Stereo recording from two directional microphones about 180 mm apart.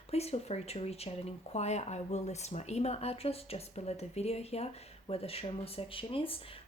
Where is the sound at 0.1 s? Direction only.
35° left (ahead or behind).